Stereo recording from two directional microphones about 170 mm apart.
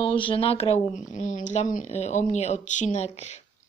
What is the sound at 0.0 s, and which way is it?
A woman's voice, 30° left (ahead or behind).